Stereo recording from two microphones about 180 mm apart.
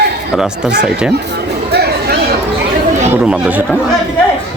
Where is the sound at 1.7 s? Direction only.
60° right (ahead or behind).